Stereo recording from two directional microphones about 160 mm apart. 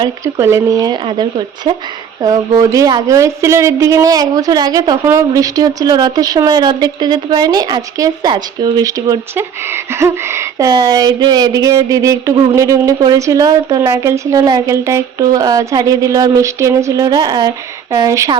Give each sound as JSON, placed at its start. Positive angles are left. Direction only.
{"t": 0.3, "sound": "a woman's voice", "side_deg": -15}